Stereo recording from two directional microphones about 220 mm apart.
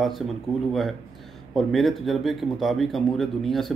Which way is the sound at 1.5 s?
Centre (ahead or behind).